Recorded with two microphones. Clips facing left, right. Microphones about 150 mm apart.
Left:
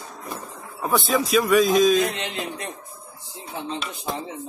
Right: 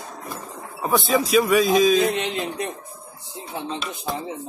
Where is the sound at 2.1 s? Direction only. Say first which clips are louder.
Right 5 dB; 25° right (ahead or behind).